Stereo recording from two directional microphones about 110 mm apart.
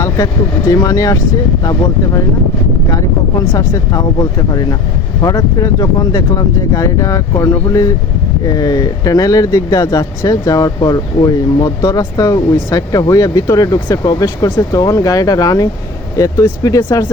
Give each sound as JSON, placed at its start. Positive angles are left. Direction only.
{"t": 0.7, "sound": "speech", "side_deg": 35}
{"t": 2.9, "sound": "speech", "side_deg": 30}